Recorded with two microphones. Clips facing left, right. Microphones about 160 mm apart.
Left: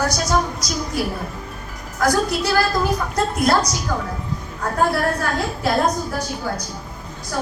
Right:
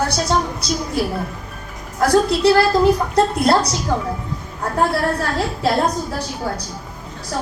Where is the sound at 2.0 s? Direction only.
30° right (ahead or behind).